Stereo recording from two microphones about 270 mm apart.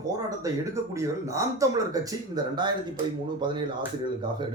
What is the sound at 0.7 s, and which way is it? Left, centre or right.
Speech, centre.